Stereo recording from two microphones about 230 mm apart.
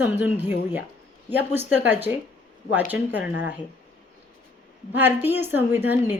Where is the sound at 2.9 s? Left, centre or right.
Centre.